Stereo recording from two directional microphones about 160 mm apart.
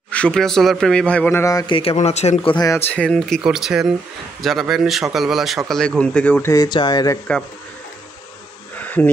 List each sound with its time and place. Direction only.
0.1 s speech: 5° left (ahead or behind)
1.7 s speech: 35° left (ahead or behind)
2.5 s speech: 20° left (ahead or behind)
2.9 s a man's voice: 5° left (ahead or behind)
6.5 s speech: 25° left (ahead or behind)
8.7 s insect: 10° left (ahead or behind)